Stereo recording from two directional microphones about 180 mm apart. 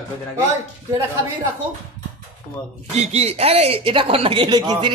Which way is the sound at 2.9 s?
35° right (ahead or behind).